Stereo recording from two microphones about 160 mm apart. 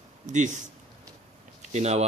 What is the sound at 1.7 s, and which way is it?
Speech, 45° right (ahead or behind).